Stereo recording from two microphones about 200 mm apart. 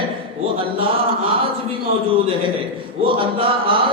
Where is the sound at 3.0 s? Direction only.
25° right (ahead or behind).